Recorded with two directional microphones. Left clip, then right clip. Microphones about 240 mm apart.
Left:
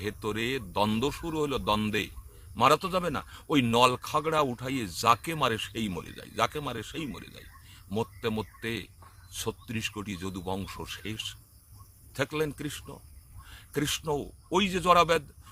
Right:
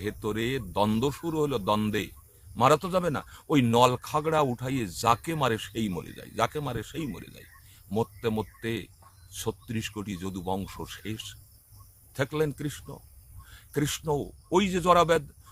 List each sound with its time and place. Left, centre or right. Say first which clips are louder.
0.0 s a man's voice: right 1 dB; centre